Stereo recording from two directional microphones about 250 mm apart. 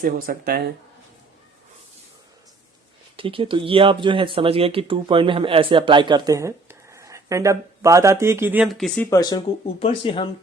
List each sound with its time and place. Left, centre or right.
0.0 s speech: right
3.2 s speech: right; by 9.0 s centre
9.0 s speech: centre